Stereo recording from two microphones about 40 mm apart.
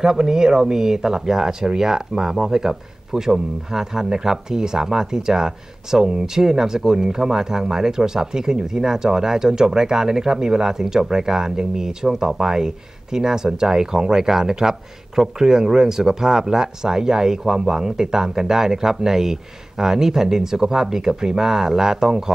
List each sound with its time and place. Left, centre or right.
0.0 s speech: centre